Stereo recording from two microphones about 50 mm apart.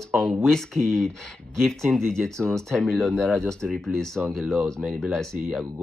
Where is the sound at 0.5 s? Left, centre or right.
Centre.